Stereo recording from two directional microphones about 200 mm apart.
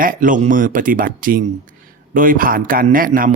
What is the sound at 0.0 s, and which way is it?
Speech, 45° right (ahead or behind).